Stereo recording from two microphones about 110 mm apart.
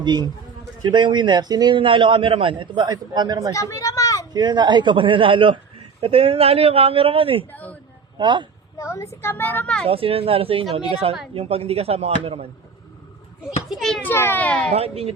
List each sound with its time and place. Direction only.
0.0 s a man's voice: 40° right (ahead or behind)
3.5 s a sound: 30° left (ahead or behind)
4.3 s a man's voice: 40° right (ahead or behind); by 7.4 s 55° right (ahead or behind)
7.5 s speech: 15° left (ahead or behind)
8.2 s a man's voice: 45° right (ahead or behind)
8.8 s a sound: 25° left (ahead or behind)
9.2 s speech: 20° left (ahead or behind)
9.8 s speech: 60° right (ahead or behind)
13.7 s a child's voice: centre (ahead or behind)
14.0 s a child's voice: 20° left (ahead or behind)
14.7 s speech: 65° right (ahead or behind)